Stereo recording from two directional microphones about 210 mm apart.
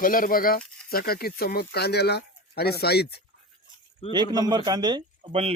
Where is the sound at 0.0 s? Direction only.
40° left (ahead or behind).